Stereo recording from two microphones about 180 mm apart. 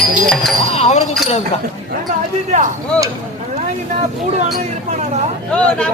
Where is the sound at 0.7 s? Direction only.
40° left (ahead or behind).